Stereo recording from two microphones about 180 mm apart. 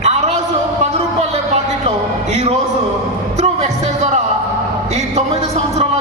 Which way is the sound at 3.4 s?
40° right (ahead or behind).